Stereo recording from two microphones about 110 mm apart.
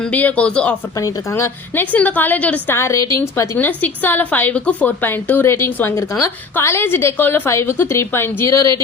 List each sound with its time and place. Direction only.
0.0 s a woman's voice: 15° left (ahead or behind)
0.9 s a woman's voice: 30° left (ahead or behind)
2.7 s a woman's voice: 25° left (ahead or behind)